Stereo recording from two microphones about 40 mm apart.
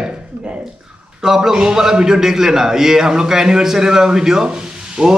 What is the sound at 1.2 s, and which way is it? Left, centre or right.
A man's voice, centre.